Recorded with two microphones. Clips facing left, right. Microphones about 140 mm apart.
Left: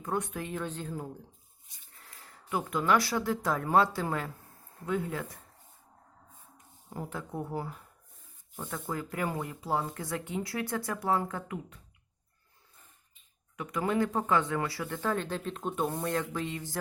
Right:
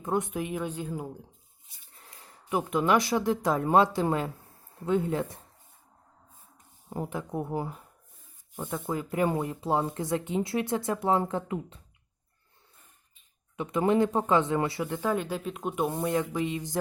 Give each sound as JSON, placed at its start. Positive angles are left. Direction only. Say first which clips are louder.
{"t": 0.0, "sound": "speech", "louder": "right 4 dB", "side_deg": -20}
{"t": 6.9, "sound": "speech", "louder": "right 5 dB", "side_deg": -20}
{"t": 13.6, "sound": "speech", "louder": "right 5 dB", "side_deg": -25}